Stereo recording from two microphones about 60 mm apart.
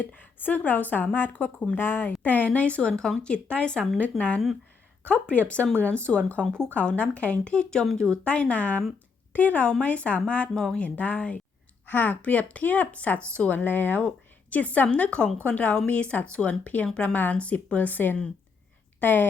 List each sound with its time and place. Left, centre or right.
0.0 s speech: left
1.5 s speech: centre
1.8 s speech: left
2.2 s speech: left
4.1 s speech: centre
5.9 s a woman's voice: centre